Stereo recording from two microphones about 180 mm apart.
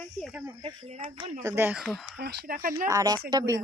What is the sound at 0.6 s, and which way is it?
Speech, 30° right (ahead or behind).